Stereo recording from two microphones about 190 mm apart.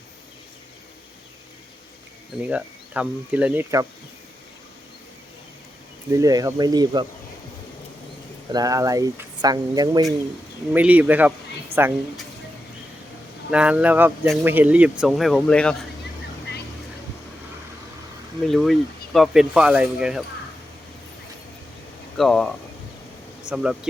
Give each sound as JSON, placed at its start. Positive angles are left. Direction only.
{"t": 2.4, "sound": "speech", "side_deg": -5}
{"t": 6.1, "sound": "speech", "side_deg": -15}
{"t": 8.5, "sound": "speech", "side_deg": -20}
{"t": 10.7, "sound": "speech", "side_deg": -10}
{"t": 13.5, "sound": "speech", "side_deg": -5}
{"t": 18.4, "sound": "speech", "side_deg": 0}
{"t": 22.2, "sound": "speech", "side_deg": 5}